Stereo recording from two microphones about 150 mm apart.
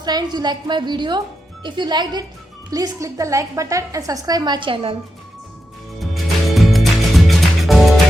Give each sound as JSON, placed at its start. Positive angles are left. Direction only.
{"t": 0.0, "sound": "a woman's voice", "side_deg": -25}
{"t": 6.5, "sound": "music", "side_deg": 0}